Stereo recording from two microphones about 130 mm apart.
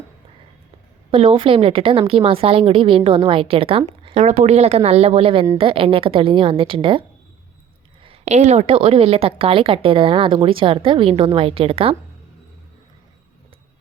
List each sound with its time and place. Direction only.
1.1 s a woman's voice: 45° right (ahead or behind)
4.0 s a woman's voice: 60° right (ahead or behind); by 7.0 s 40° right (ahead or behind)
8.0 s a woman's voice: 55° right (ahead or behind)